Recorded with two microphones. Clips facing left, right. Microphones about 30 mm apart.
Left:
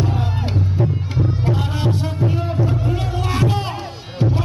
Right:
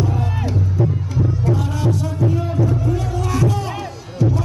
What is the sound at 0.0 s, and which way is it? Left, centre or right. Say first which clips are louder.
Music: even; left.